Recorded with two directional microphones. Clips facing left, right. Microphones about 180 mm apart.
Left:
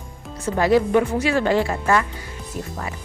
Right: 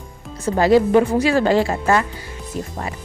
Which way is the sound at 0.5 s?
30° right (ahead or behind).